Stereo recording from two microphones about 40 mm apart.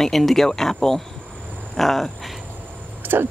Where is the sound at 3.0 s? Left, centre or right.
Right.